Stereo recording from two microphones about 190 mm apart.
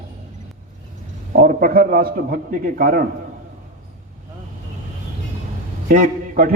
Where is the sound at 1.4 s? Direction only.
50° right (ahead or behind).